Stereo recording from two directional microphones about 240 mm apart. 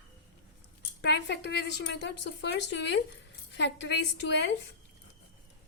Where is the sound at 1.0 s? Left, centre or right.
Left.